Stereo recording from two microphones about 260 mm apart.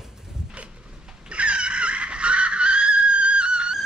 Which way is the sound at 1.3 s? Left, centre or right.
Centre.